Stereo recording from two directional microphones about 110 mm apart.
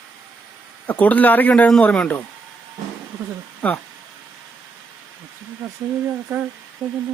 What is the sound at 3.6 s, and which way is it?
Speech, 10° left (ahead or behind).